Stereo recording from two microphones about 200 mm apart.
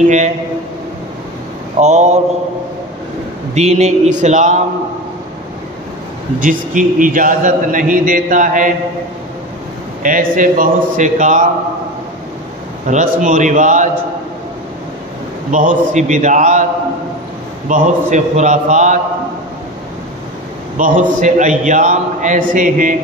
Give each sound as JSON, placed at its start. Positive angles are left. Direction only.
{"t": 1.8, "sound": "a man's voice", "side_deg": -35}
{"t": 3.5, "sound": "a man's voice", "side_deg": -35}
{"t": 6.4, "sound": "a man's voice", "side_deg": -40}
{"t": 10.0, "sound": "a man's voice", "side_deg": -40}
{"t": 12.8, "sound": "a man's voice", "side_deg": -40}
{"t": 15.5, "sound": "a man's voice", "side_deg": -40}
{"t": 17.6, "sound": "a man's voice", "side_deg": -40}
{"t": 20.7, "sound": "a man's voice", "side_deg": -40}